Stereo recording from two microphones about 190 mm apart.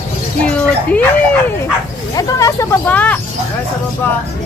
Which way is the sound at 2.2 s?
15° left (ahead or behind).